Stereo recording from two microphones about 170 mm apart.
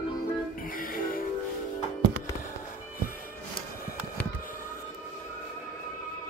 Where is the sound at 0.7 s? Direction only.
55° left (ahead or behind).